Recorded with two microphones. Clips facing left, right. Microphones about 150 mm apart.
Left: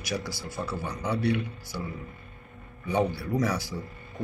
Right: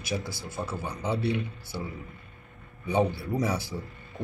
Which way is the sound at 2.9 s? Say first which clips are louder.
Even; 20° right (ahead or behind).